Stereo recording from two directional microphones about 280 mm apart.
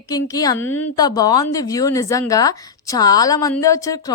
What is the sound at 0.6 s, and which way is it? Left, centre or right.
Speech, left.